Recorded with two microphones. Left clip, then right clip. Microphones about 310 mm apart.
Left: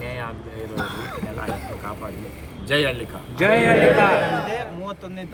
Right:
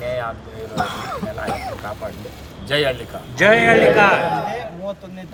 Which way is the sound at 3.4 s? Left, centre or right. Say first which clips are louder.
Right 4 dB; right.